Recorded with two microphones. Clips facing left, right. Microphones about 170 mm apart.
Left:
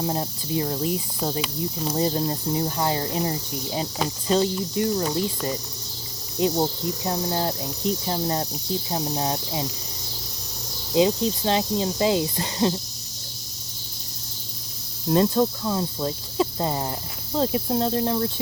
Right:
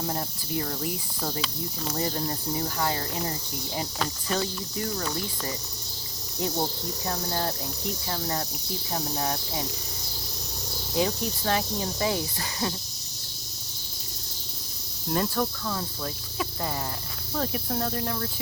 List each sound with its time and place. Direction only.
0.0 s cricket: 20° left (ahead or behind)
10.9 s cricket: 20° left (ahead or behind)
15.1 s cricket: 25° left (ahead or behind)